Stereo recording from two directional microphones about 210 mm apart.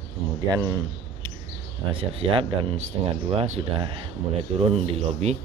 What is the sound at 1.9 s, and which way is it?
Speech, 25° right (ahead or behind).